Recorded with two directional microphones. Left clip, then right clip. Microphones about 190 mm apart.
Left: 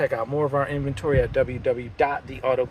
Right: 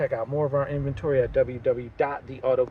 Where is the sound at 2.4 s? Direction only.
20° right (ahead or behind).